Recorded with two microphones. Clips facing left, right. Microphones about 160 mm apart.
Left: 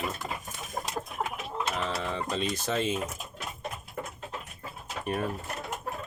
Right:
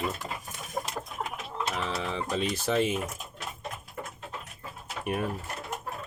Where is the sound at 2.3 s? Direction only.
10° right (ahead or behind).